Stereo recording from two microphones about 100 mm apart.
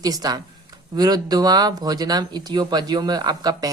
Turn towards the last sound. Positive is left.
turn(degrees=-40)  # may be behind; listen again after turning